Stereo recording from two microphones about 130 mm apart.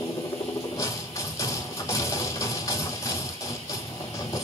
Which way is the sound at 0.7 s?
25° left (ahead or behind).